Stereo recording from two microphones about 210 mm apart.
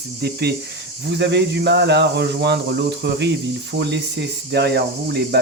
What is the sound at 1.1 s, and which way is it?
Speech, 55° right (ahead or behind).